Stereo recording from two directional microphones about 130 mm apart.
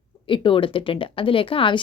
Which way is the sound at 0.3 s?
40° left (ahead or behind).